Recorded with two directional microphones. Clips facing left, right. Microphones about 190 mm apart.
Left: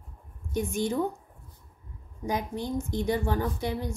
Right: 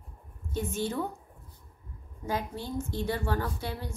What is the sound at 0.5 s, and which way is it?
Speech, 15° left (ahead or behind).